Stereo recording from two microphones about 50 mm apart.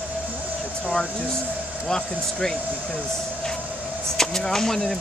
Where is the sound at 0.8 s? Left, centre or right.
Left.